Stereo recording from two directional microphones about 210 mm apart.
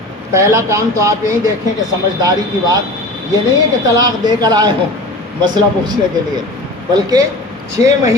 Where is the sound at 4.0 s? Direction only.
20° right (ahead or behind).